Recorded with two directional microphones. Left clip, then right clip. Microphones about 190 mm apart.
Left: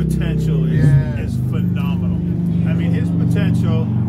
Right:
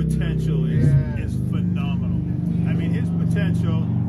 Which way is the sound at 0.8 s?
20° left (ahead or behind).